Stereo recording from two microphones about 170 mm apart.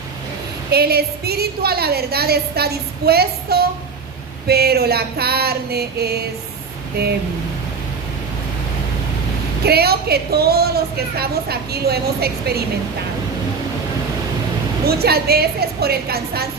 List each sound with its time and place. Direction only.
0.7 s a woman's voice: 65° right (ahead or behind)
9.6 s a woman's voice: 65° right (ahead or behind)
14.8 s a woman's voice: 65° right (ahead or behind)